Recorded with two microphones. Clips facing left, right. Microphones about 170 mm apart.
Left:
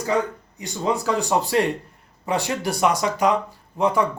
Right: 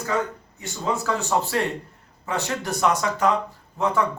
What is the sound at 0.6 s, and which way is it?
Speech, 15° left (ahead or behind).